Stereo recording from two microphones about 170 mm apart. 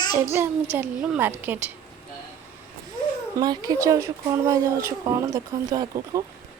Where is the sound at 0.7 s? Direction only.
10° right (ahead or behind).